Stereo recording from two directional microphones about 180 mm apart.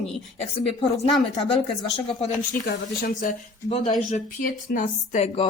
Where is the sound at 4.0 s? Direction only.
45° left (ahead or behind).